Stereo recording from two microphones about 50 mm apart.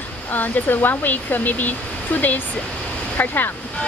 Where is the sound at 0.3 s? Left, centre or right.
Left.